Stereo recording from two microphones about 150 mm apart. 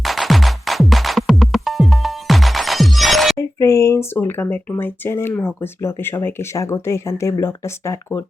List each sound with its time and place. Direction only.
0.0 s music: centre (ahead or behind)
3.3 s speech: 20° left (ahead or behind)